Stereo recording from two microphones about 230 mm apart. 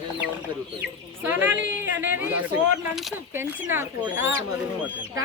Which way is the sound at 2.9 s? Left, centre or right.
Centre.